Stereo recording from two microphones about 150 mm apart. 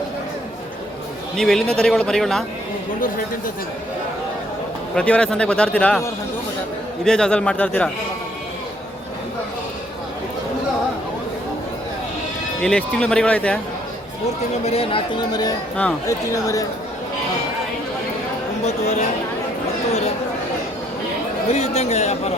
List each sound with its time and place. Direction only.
1.4 s speech: 5° left (ahead or behind)
4.9 s speech: 5° left (ahead or behind)
7.0 s speech: 5° left (ahead or behind)
12.6 s speech: 10° left (ahead or behind)
14.6 s speech: 40° left (ahead or behind); by 16.6 s 20° left (ahead or behind)
18.6 s speech: 50° left (ahead or behind)
21.5 s speech: 45° left (ahead or behind)